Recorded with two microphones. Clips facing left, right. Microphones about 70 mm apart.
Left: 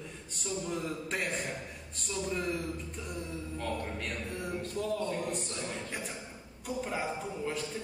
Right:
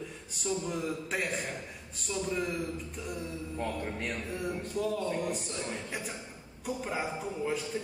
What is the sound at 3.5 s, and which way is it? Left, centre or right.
Speech, centre.